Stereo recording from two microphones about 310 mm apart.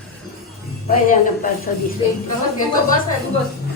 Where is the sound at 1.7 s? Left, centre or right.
Left.